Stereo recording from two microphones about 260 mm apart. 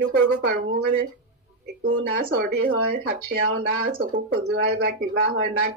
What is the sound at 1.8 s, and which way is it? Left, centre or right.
Speech, right.